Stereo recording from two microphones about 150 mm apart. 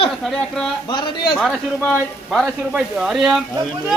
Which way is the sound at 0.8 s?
30° left (ahead or behind).